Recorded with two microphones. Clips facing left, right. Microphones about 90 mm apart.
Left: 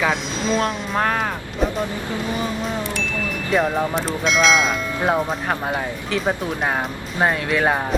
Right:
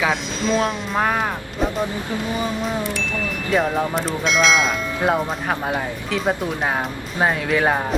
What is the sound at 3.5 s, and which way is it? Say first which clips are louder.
Speech: even; centre (ahead or behind).